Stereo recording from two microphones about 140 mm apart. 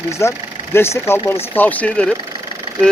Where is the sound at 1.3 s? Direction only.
15° left (ahead or behind).